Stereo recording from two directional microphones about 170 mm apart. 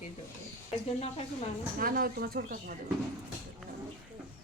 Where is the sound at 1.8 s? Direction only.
55° right (ahead or behind).